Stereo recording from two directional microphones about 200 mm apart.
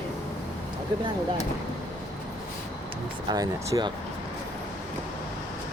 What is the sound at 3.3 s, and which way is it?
Speech, 20° right (ahead or behind).